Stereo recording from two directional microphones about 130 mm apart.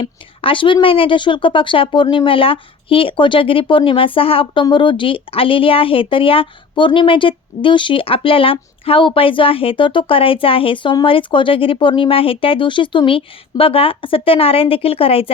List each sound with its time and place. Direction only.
0.0 s a woman's voice: 40° left (ahead or behind)